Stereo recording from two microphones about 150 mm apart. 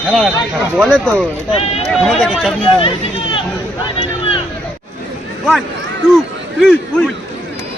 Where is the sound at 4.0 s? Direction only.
40° left (ahead or behind).